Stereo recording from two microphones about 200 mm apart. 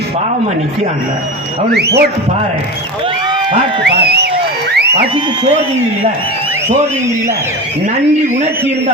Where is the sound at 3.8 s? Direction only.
55° right (ahead or behind).